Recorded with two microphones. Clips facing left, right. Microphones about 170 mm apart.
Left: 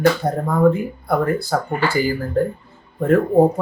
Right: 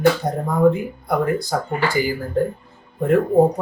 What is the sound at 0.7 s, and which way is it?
Speech, 15° right (ahead or behind).